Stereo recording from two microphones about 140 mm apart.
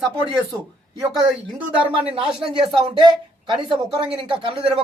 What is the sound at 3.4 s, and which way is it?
Speech, 35° right (ahead or behind).